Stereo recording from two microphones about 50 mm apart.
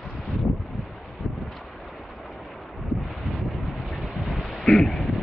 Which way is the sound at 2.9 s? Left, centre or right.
Centre.